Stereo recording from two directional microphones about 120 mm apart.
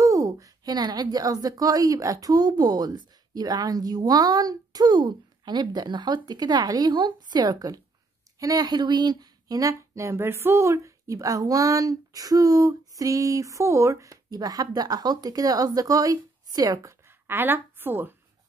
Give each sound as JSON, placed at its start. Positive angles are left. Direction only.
{"t": 0.0, "sound": "a woman's voice", "side_deg": -30}
{"t": 17.3, "sound": "a woman's voice", "side_deg": -15}